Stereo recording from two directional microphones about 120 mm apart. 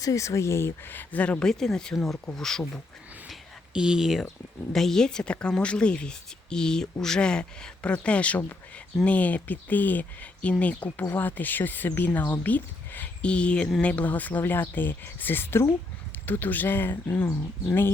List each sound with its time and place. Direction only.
0.0 s speech: 25° left (ahead or behind); by 2.8 s 5° left (ahead or behind)
3.8 s speech: 5° right (ahead or behind); by 17.9 s 15° left (ahead or behind)